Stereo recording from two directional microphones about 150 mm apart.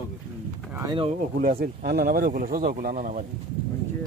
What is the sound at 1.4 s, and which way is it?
Speech, 75° right (ahead or behind).